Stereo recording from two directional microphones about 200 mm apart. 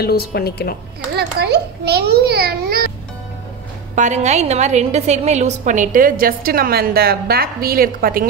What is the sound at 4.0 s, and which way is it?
A woman's voice, 35° right (ahead or behind).